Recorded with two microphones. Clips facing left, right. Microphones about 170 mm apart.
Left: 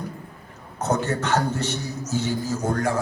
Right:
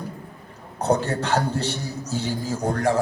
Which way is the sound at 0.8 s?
35° right (ahead or behind).